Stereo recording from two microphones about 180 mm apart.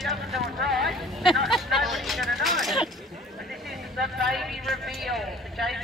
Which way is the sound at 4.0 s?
Centre (ahead or behind).